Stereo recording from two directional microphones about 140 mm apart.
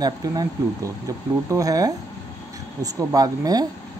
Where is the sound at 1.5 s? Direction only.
25° right (ahead or behind).